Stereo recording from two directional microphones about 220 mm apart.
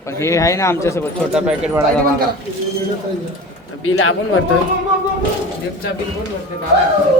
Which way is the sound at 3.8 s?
70° left (ahead or behind).